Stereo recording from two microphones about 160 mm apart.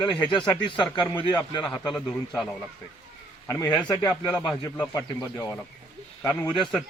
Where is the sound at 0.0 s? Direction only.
30° left (ahead or behind).